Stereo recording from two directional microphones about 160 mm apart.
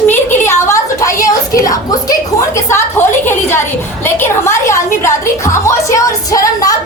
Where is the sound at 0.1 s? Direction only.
15° left (ahead or behind).